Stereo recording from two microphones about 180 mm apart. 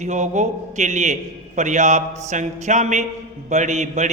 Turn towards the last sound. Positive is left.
turn(degrees=-40)  # may be behind; listen again after turning